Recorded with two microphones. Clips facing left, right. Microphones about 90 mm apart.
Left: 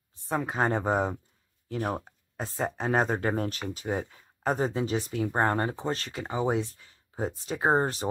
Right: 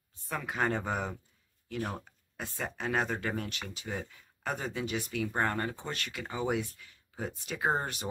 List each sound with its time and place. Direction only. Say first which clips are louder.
0.3 s speech: left 5 dB; 30° left (ahead or behind)